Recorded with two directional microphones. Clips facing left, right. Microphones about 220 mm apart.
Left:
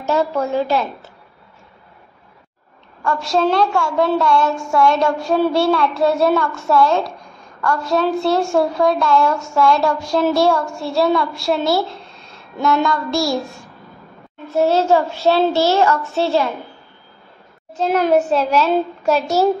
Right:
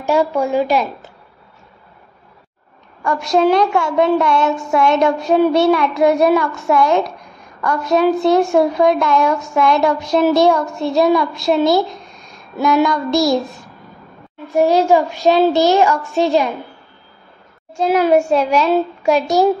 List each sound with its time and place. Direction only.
0.0 s a woman's voice: 15° right (ahead or behind)
3.0 s a woman's voice: 15° right (ahead or behind)
14.5 s a woman's voice: 15° right (ahead or behind)
17.7 s a woman's voice: 10° right (ahead or behind)